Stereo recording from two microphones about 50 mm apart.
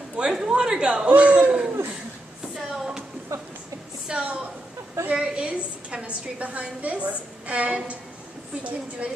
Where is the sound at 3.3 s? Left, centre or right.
Right.